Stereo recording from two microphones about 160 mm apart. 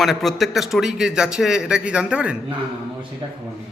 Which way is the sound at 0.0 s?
Centre (ahead or behind).